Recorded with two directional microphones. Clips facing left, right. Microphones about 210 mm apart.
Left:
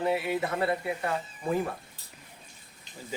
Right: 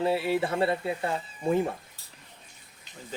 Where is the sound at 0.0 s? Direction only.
30° right (ahead or behind).